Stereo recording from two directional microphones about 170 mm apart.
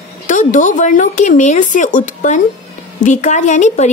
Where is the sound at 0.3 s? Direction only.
50° left (ahead or behind).